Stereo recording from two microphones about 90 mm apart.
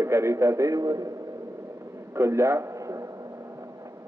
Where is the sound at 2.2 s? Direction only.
30° right (ahead or behind).